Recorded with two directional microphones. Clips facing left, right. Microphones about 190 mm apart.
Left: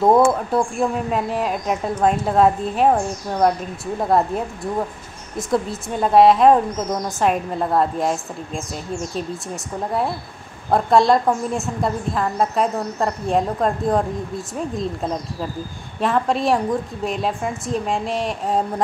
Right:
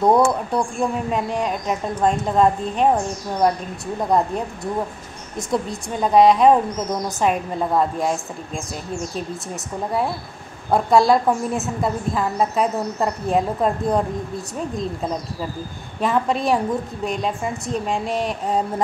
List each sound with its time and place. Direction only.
0.0 s a woman's voice: centre (ahead or behind)
10.7 s a woman's voice: centre (ahead or behind)